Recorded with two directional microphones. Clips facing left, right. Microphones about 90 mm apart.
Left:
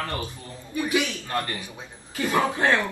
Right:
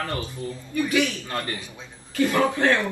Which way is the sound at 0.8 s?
20° left (ahead or behind).